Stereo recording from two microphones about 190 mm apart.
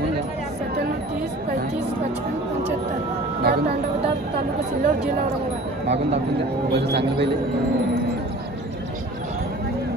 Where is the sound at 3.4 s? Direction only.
55° right (ahead or behind).